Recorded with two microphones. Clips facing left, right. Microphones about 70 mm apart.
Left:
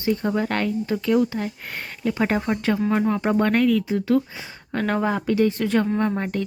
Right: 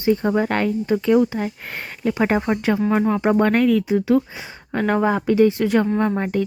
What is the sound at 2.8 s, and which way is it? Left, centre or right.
Speech, centre.